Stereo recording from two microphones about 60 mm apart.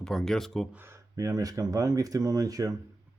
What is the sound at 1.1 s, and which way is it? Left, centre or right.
Speech, right.